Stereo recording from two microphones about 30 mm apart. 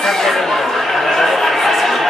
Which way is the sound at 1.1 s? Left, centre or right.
Centre.